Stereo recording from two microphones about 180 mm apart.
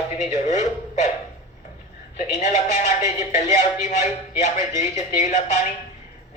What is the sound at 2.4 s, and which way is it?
Speech, 40° left (ahead or behind).